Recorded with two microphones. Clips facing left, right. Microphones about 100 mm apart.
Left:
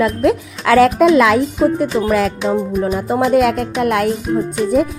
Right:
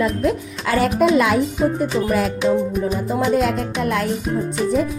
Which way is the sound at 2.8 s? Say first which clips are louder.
Left 4 dB; 65° left (ahead or behind).